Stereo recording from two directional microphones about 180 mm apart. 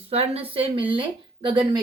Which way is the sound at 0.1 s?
35° right (ahead or behind).